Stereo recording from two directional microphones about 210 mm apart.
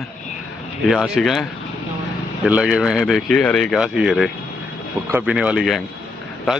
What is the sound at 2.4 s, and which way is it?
Speech, 5° right (ahead or behind).